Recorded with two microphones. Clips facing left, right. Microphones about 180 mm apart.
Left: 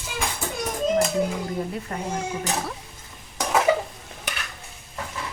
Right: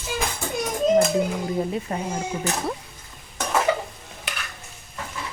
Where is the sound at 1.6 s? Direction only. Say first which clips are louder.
Right 4 dB; 20° right (ahead or behind).